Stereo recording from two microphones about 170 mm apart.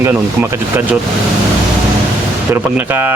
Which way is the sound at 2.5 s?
10° right (ahead or behind).